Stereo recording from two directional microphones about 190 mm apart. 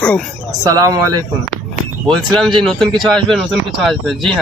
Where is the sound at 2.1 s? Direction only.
Centre (ahead or behind).